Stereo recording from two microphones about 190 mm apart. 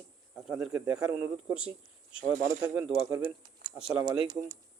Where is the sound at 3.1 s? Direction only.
20° right (ahead or behind).